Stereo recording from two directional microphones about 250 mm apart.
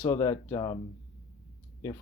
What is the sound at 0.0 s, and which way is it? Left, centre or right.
Speech, centre.